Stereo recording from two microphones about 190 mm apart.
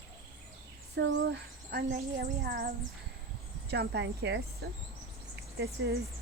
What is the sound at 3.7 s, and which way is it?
Speech, 60° right (ahead or behind).